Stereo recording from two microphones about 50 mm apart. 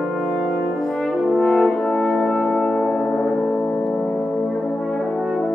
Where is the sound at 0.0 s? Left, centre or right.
Centre.